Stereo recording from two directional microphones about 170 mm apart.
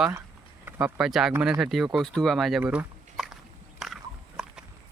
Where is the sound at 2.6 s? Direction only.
10° right (ahead or behind).